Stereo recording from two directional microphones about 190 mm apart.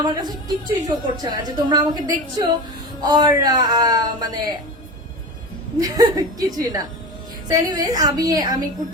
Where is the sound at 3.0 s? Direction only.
20° right (ahead or behind).